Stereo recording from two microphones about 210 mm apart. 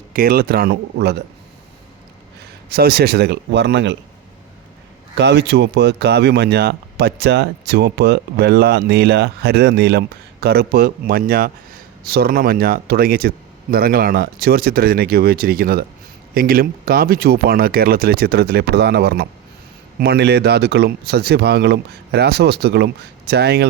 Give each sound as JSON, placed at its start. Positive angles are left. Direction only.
{"t": 0.1, "sound": "speech", "side_deg": -45}
{"t": 2.6, "sound": "speech", "side_deg": -45}
{"t": 5.1, "sound": "speech", "side_deg": -55}